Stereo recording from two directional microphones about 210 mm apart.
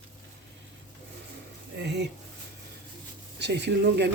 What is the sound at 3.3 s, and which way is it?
Speech, 55° right (ahead or behind).